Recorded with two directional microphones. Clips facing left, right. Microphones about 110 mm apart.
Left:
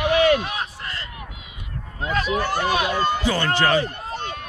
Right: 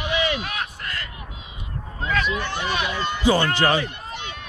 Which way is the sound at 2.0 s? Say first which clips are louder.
Left 2 dB; 35° left (ahead or behind).